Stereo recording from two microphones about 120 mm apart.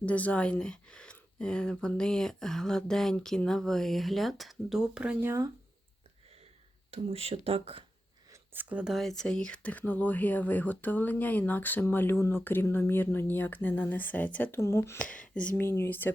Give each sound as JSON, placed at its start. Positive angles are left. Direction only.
{"t": 0.0, "sound": "speech", "side_deg": 10}
{"t": 5.2, "sound": "speech", "side_deg": -20}
{"t": 6.9, "sound": "speech", "side_deg": -55}
{"t": 8.7, "sound": "speech", "side_deg": -5}
{"t": 14.9, "sound": "speech", "side_deg": 10}
{"t": 15.6, "sound": "speech", "side_deg": 20}